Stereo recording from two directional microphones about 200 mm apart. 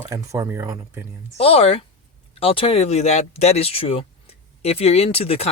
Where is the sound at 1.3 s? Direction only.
30° left (ahead or behind).